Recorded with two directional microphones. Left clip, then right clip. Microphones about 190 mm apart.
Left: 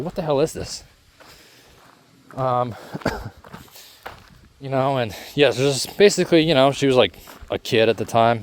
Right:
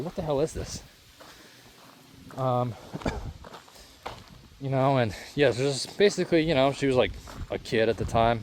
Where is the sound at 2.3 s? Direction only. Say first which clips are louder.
Left 6 dB; 40° left (ahead or behind).